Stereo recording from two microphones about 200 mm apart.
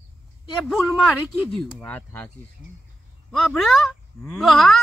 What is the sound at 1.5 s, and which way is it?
Speech, 10° left (ahead or behind).